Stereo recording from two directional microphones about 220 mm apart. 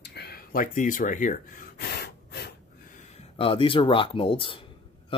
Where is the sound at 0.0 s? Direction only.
50° left (ahead or behind).